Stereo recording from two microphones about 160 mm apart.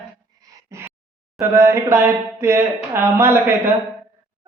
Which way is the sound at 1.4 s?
15° right (ahead or behind).